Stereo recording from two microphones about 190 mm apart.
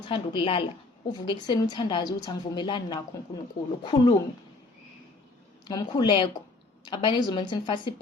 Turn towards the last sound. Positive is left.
turn(degrees=25)  # may be behind; listen again after turning